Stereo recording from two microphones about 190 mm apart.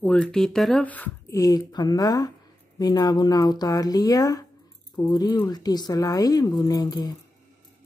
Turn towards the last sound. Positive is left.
turn(degrees=20)  # may be behind; listen again after turning